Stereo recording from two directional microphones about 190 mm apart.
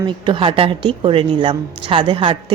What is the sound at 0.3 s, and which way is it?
A woman's voice, 25° right (ahead or behind).